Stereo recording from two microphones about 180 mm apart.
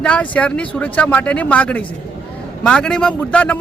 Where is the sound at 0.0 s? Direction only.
5° left (ahead or behind).